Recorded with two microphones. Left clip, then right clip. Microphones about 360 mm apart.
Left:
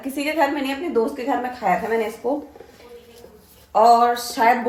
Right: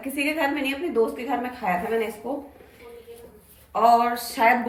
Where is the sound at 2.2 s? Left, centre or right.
Centre.